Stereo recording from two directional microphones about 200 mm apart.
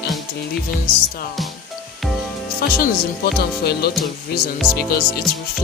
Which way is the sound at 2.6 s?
50° left (ahead or behind).